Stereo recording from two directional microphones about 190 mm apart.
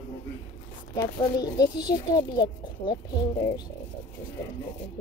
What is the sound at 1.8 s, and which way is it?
Speech, 20° left (ahead or behind).